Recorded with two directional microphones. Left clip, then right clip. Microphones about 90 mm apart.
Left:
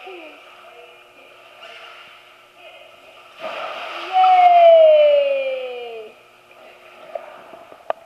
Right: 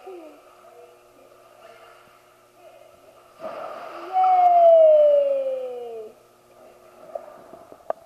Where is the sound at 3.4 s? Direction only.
30° left (ahead or behind).